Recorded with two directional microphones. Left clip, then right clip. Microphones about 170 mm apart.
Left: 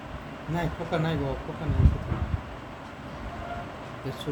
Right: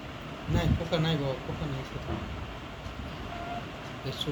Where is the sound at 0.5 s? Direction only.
55° left (ahead or behind).